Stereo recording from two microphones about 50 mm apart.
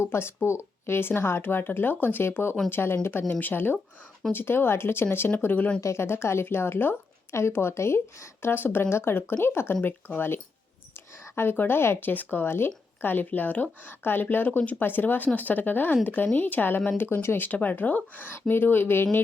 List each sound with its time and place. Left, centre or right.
0.0 s speech: left
5.4 s speech: left
5.8 s speech: left
7.3 s speech: left
11.5 s speech: left
11.8 s speech: left
12.0 s speech: left